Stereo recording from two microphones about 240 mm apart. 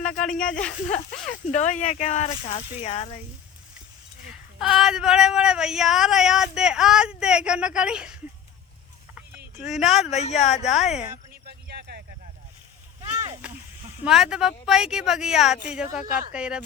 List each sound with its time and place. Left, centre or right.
0.2 s speech: centre
1.3 s speech: left
4.3 s speech: centre
9.7 s speech: centre
10.1 s speech: left
10.7 s speech: centre
11.4 s a sound: right
14.0 s speech: centre